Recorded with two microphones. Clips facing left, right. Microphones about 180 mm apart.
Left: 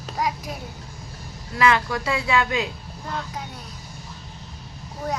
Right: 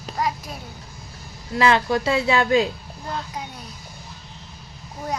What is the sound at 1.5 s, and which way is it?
Speech, 30° right (ahead or behind).